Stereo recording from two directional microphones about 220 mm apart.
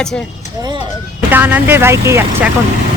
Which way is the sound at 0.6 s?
20° right (ahead or behind).